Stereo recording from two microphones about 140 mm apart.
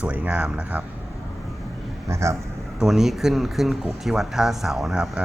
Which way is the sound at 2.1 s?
20° right (ahead or behind).